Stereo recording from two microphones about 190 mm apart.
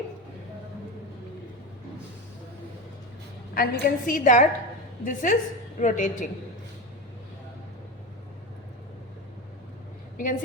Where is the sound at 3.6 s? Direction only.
50° left (ahead or behind).